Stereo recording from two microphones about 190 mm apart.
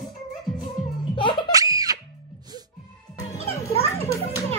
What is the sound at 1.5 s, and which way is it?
Music, 20° right (ahead or behind).